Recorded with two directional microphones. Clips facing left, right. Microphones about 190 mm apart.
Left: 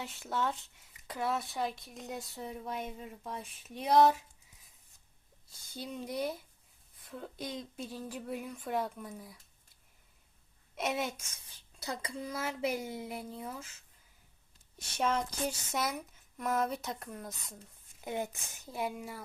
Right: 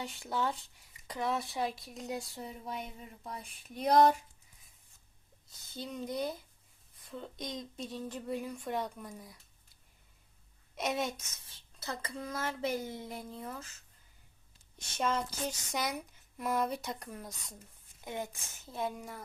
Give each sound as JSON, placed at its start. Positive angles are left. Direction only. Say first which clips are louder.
{"t": 0.0, "sound": "speech", "louder": "even", "side_deg": 0}
{"t": 5.5, "sound": "speech", "louder": "even", "side_deg": 10}
{"t": 10.8, "sound": "speech", "louder": "even", "side_deg": 5}
{"t": 11.8, "sound": "speech", "louder": "left 1 dB", "side_deg": 15}
{"t": 14.9, "sound": "speech", "louder": "left 1 dB", "side_deg": 10}
{"t": 18.0, "sound": "speech", "louder": "left 3 dB", "side_deg": 15}